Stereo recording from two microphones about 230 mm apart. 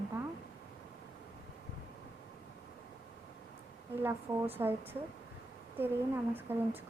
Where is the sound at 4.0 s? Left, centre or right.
Centre.